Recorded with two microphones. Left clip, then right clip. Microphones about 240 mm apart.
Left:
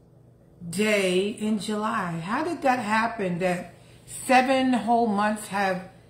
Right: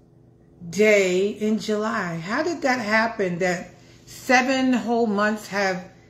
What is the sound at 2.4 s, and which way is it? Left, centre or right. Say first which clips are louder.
Speech: right 1 dB; centre.